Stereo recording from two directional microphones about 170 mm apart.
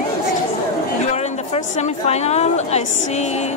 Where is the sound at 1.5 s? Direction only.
40° left (ahead or behind).